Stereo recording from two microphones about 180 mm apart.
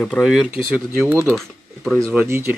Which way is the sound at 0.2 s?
5° right (ahead or behind).